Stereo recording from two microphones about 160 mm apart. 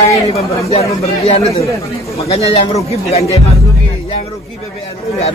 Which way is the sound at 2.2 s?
40° left (ahead or behind).